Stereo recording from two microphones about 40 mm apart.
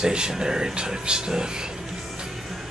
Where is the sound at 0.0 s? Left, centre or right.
Centre.